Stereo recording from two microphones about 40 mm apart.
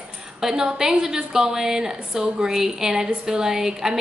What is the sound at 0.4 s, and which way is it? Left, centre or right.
A woman's voice, centre.